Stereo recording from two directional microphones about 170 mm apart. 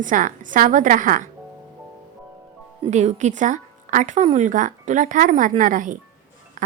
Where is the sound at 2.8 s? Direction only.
40° right (ahead or behind).